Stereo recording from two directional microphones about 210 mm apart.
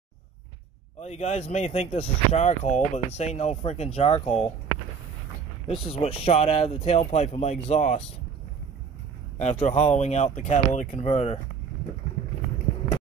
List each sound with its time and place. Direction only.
0.9 s speech: 30° left (ahead or behind)
5.7 s speech: 30° left (ahead or behind)
9.4 s speech: 35° left (ahead or behind)